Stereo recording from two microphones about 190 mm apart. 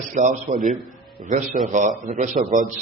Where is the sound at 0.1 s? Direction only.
40° right (ahead or behind).